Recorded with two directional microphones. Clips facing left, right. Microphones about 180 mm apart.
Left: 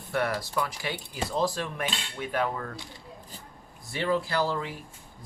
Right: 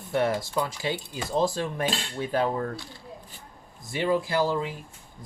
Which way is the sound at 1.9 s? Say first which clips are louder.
Right 5 dB; 30° right (ahead or behind).